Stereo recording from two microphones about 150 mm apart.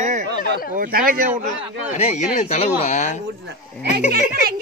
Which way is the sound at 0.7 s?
70° right (ahead or behind).